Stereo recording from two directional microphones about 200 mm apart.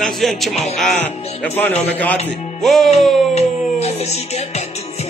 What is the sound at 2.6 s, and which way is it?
Music, centre (ahead or behind).